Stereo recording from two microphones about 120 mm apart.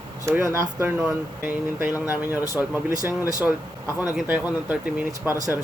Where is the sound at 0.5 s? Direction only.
20° right (ahead or behind).